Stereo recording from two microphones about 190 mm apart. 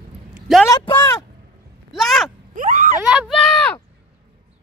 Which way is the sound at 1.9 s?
Centre (ahead or behind).